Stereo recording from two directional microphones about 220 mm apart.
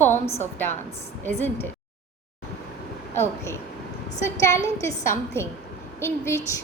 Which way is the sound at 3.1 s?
10° left (ahead or behind).